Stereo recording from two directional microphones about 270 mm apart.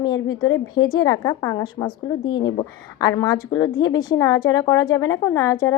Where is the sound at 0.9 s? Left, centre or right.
Centre.